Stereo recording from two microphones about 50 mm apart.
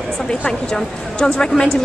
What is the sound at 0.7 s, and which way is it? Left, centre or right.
Speech, centre.